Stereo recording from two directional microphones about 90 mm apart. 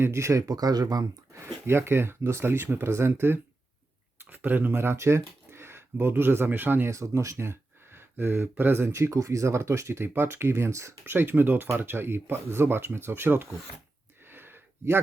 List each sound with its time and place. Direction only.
0.0 s speech: 30° right (ahead or behind)
0.4 s speech: 45° right (ahead or behind)
1.6 s speech: 25° right (ahead or behind)
6.9 s speech: 35° right (ahead or behind)
14.3 s a sound: 25° right (ahead or behind)